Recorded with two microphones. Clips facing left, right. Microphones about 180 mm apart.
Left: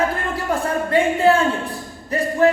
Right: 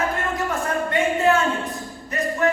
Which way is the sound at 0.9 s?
30° left (ahead or behind).